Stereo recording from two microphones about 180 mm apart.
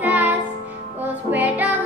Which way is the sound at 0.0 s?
10° right (ahead or behind).